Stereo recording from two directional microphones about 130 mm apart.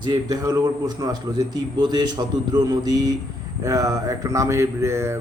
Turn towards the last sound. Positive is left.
turn(degrees=-20)  # may be behind; listen again after turning